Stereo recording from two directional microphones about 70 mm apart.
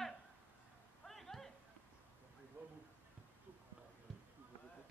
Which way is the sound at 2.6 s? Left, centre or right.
Right.